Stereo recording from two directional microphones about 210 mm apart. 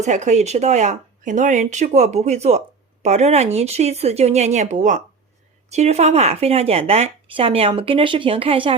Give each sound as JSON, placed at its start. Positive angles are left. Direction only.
{"t": 0.0, "sound": "speech", "side_deg": -35}